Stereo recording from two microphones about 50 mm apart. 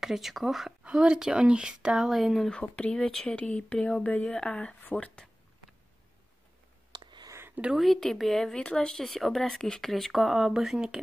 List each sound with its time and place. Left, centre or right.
0.0 s speech: centre
1.0 s speech: centre
2.0 s speech: centre
2.5 s speech: left
7.7 s speech: centre
8.5 s speech: centre
9.0 s speech: centre